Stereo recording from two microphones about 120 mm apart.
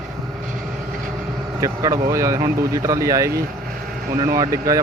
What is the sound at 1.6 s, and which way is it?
Speech, 30° right (ahead or behind).